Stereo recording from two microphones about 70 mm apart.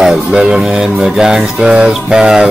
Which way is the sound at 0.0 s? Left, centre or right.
Centre.